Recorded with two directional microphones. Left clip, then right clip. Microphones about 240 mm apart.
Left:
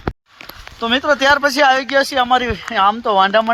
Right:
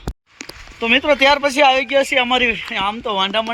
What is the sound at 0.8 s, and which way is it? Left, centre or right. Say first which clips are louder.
Speech: right 1 dB; centre.